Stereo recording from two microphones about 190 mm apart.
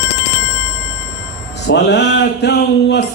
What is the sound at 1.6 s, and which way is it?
Speech, 65° left (ahead or behind).